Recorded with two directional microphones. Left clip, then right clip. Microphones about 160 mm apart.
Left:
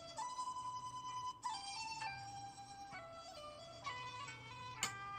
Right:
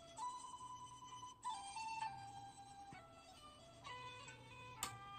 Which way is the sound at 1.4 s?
35° left (ahead or behind).